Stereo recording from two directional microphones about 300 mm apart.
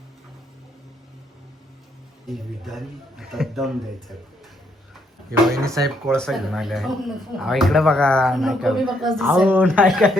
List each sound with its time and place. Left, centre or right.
2.2 s speech: centre
5.3 s speech: centre
6.1 s speech: centre